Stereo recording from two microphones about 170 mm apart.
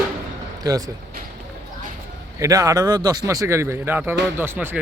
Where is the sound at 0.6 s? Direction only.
20° right (ahead or behind).